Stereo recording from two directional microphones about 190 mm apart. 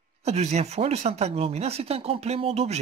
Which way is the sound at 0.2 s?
35° right (ahead or behind).